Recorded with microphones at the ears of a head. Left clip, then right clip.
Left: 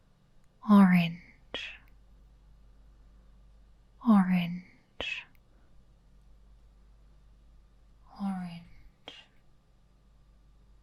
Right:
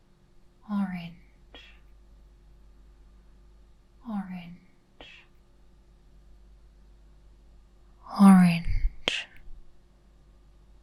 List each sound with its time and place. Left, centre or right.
0.6 s whispering: left
4.0 s whispering: left
8.0 s whispering: right